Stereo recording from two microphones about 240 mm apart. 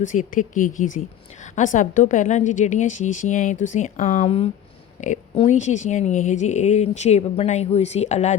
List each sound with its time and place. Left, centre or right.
0.3 s a woman's voice: left